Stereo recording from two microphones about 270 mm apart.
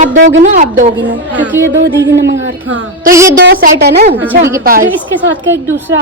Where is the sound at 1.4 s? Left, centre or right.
Centre.